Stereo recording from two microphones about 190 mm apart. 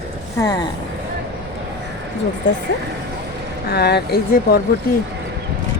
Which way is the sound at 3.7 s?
60° left (ahead or behind).